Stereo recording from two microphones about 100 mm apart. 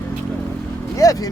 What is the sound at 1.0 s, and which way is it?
Speech, 35° left (ahead or behind).